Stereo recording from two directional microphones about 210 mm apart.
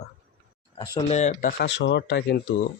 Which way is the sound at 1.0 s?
30° left (ahead or behind).